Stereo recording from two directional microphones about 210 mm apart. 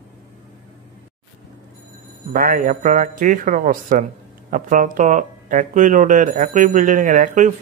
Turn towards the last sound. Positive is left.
turn(degrees=-35)  # may be behind; listen again after turning